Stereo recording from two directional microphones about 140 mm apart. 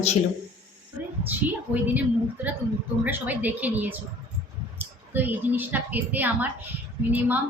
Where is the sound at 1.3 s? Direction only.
10° right (ahead or behind).